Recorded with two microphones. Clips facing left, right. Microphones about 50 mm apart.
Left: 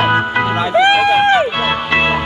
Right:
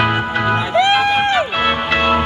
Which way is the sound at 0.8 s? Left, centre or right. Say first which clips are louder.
Left 4 dB; left.